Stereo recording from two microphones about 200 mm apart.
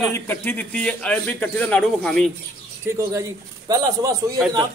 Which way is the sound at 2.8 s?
15° right (ahead or behind).